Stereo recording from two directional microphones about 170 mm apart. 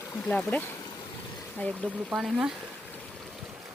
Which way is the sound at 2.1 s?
5° right (ahead or behind).